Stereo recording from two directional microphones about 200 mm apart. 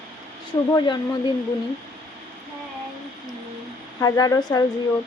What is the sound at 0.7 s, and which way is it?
Speech, 20° left (ahead or behind).